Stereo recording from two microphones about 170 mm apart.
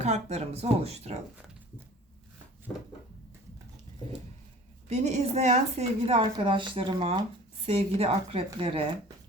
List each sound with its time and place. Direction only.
0.0 s a woman's voice: 40° right (ahead or behind)
4.9 s a woman's voice: 40° right (ahead or behind)